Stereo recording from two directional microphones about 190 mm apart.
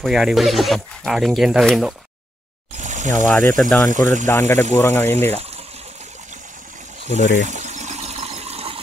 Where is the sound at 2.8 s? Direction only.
40° right (ahead or behind).